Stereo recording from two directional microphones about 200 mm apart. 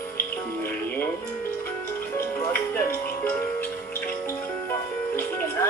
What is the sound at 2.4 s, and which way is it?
Music, 10° left (ahead or behind).